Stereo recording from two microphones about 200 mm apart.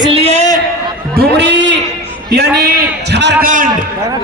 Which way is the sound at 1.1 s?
55° right (ahead or behind).